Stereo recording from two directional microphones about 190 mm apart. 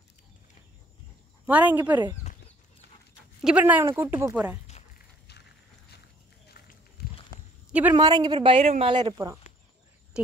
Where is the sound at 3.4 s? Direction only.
10° right (ahead or behind).